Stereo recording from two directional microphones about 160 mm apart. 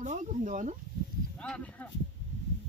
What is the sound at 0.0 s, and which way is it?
Speech, 50° right (ahead or behind).